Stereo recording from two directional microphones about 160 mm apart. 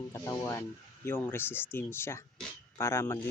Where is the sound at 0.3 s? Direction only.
20° left (ahead or behind).